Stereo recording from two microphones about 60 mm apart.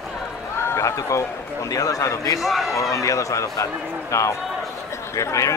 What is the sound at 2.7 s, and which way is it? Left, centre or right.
Speech, left.